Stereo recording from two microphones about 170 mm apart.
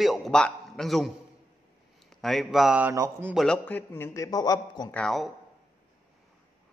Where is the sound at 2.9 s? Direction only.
15° right (ahead or behind).